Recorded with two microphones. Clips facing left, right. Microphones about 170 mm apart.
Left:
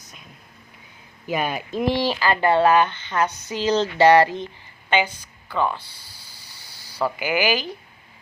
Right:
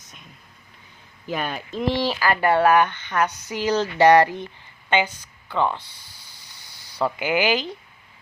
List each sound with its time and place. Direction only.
1.3 s speech: 10° left (ahead or behind)
2.2 s speech: 20° left (ahead or behind)
3.2 s speech: 10° right (ahead or behind)
4.9 s a woman's voice: 15° left (ahead or behind)
5.5 s speech: 20° right (ahead or behind)
6.6 s snake: 10° left (ahead or behind)
7.0 s speech: 20° right (ahead or behind)